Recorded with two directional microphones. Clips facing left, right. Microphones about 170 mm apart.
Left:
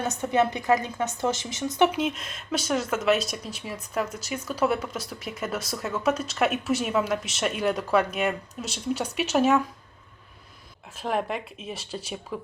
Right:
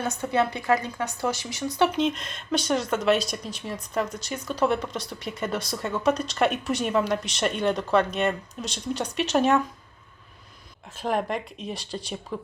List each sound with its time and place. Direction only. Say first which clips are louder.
0.2 s a woman's voice: left 2 dB; 20° left (ahead or behind)
1.9 s speech: right 3 dB; 5° left (ahead or behind)
10.9 s speech: right 1 dB; centre (ahead or behind)